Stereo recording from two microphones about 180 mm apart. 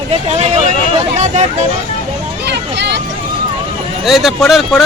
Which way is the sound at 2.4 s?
70° right (ahead or behind).